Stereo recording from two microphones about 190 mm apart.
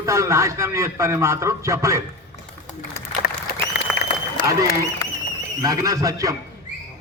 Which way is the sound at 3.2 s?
60° left (ahead or behind).